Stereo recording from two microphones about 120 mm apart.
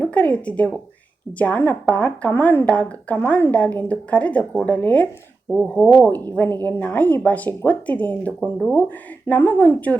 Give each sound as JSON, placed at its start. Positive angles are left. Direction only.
{"t": 0.0, "sound": "a woman's voice", "side_deg": 10}
{"t": 5.5, "sound": "speech", "side_deg": 0}
{"t": 6.2, "sound": "a woman's voice", "side_deg": 15}
{"t": 8.4, "sound": "speech", "side_deg": -5}
{"t": 9.2, "sound": "a woman's voice", "side_deg": 15}